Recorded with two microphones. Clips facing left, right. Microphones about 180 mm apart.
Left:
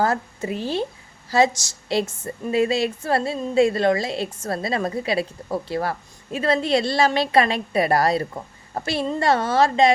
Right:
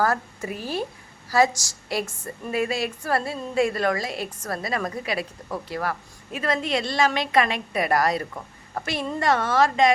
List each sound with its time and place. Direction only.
0.0 s a woman's voice: 25° left (ahead or behind)